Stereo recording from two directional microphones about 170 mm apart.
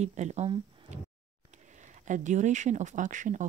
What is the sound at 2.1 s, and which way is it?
Speech, 45° right (ahead or behind).